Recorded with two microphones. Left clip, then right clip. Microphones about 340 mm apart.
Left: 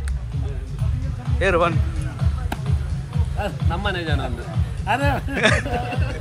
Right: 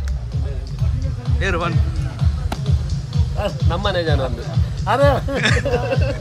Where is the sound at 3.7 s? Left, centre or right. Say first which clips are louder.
Right 6 dB; right.